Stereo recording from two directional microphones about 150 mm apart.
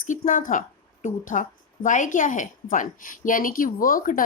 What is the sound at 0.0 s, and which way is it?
A woman's voice, 65° left (ahead or behind).